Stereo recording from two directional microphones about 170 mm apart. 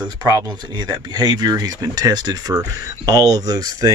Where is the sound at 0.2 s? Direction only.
25° right (ahead or behind).